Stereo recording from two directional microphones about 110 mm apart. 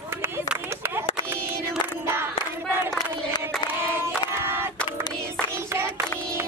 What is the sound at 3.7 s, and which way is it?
Child singing, 20° right (ahead or behind).